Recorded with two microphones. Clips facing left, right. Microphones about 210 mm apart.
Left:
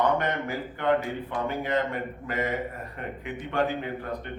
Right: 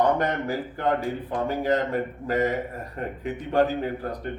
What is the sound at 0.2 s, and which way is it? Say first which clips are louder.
Speech: right 3 dB; 40° right (ahead or behind).